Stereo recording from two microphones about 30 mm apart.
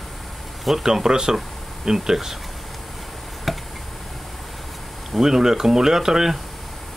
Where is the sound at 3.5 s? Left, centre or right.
Centre.